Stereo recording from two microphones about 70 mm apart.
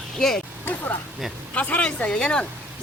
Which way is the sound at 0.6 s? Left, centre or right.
Left.